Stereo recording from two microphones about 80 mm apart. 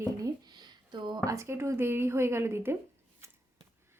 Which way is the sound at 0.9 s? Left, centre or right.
Right.